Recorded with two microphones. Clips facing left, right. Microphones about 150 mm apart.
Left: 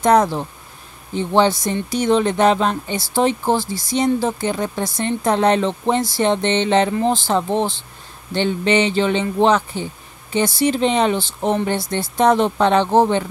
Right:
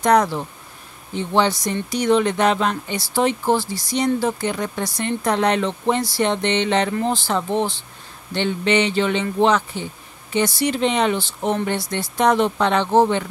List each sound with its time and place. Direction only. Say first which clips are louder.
0.0 s speech: left 2 dB; 25° left (ahead or behind)